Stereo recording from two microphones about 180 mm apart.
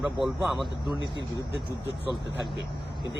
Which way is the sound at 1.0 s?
90° right.